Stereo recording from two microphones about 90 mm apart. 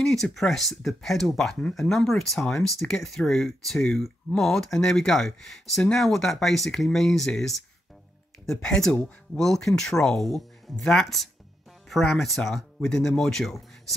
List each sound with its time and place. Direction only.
0.0 s speech: 5° left (ahead or behind)